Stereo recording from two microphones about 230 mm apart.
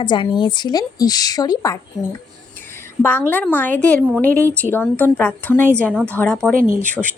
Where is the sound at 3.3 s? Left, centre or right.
Centre.